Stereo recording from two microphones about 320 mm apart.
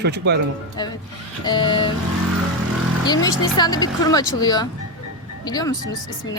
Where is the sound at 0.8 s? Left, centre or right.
Centre.